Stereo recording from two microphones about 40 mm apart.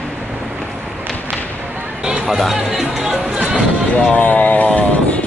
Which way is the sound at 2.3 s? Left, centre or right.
Centre.